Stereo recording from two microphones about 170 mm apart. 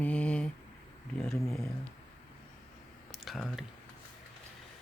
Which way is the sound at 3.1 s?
Centre (ahead or behind).